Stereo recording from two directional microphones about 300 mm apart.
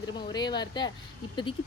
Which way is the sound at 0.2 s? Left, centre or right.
Centre.